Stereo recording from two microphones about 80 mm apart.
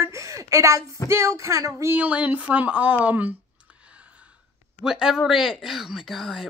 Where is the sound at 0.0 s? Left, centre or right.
Right.